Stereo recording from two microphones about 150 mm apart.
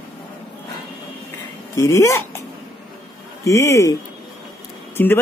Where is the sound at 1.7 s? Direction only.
20° left (ahead or behind).